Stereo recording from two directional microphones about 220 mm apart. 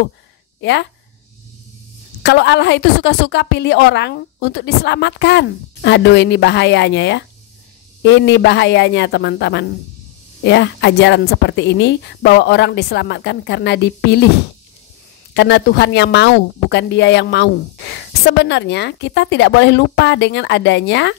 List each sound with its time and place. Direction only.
0.6 s speech: 50° left (ahead or behind)
2.2 s speech: 50° left (ahead or behind)
15.3 s speech: 50° left (ahead or behind)